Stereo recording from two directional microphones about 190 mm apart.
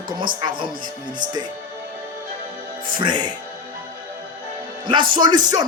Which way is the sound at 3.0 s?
25° right (ahead or behind).